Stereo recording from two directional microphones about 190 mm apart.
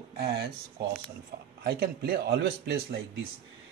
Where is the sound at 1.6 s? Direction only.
55° right (ahead or behind).